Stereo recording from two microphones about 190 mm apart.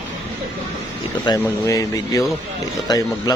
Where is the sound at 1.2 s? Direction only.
20° left (ahead or behind).